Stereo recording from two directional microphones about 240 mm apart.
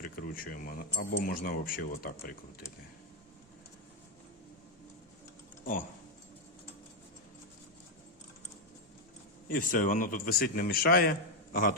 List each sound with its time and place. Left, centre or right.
0.0 s speech: left
9.5 s speech: left